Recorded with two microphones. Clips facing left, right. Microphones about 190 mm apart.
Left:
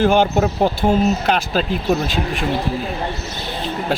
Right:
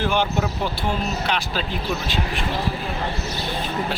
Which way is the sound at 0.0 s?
45° left (ahead or behind).